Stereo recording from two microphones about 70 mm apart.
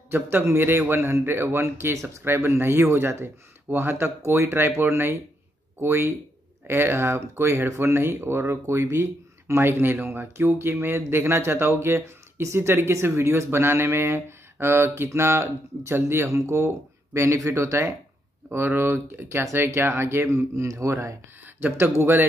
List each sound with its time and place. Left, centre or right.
0.1 s speech: right
18.5 s speech: right
21.5 s speech: right